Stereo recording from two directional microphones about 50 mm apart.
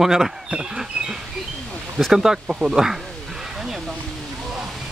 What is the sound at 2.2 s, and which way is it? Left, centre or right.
Speech, centre.